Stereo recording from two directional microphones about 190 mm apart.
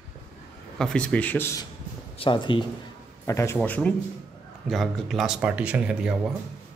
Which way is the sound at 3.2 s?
15° left (ahead or behind).